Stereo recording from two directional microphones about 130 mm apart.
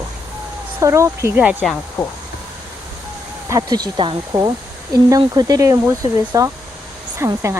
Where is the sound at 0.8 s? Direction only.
20° right (ahead or behind).